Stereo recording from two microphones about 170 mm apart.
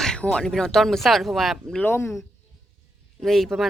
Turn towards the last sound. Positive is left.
turn(degrees=0)  # may be behind; listen again after turning